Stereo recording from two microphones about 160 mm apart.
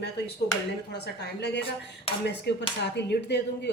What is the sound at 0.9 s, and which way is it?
A woman's voice, 90° left.